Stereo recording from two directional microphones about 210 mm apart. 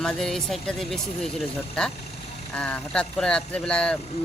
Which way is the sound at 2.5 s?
5° left (ahead or behind).